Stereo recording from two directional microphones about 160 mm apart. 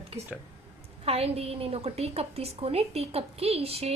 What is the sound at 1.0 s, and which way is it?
A woman's voice, 40° right (ahead or behind).